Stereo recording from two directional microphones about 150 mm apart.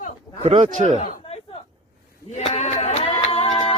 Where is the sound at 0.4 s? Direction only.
45° right (ahead or behind).